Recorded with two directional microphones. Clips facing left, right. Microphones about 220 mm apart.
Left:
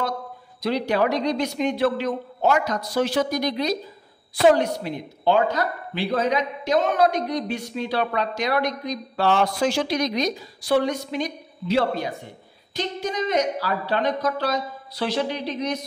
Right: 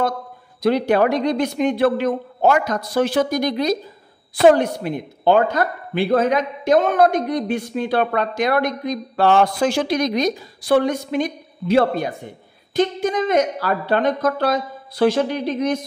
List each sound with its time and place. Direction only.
0.6 s a woman's voice: 55° right (ahead or behind)